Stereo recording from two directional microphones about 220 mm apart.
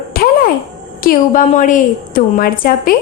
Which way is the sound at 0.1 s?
45° left (ahead or behind).